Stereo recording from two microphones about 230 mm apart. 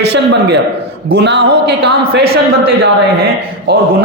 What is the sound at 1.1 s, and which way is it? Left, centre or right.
A man's voice, right.